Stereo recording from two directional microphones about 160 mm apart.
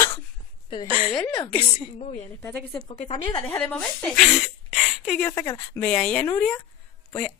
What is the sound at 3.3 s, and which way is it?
Speech, 15° left (ahead or behind).